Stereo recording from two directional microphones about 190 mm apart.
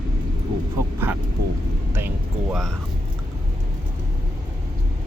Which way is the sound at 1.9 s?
10° right (ahead or behind).